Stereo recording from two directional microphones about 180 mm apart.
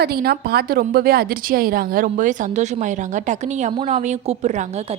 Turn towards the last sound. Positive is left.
turn(degrees=-40)  # may be behind; listen again after turning